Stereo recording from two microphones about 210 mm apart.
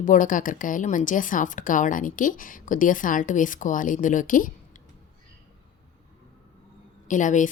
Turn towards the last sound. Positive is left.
turn(degrees=35)  # may be behind; listen again after turning